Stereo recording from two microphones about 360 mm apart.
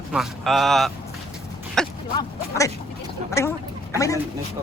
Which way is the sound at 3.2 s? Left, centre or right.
Centre.